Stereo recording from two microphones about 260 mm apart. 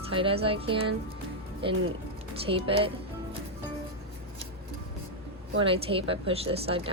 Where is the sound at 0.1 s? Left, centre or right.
Right.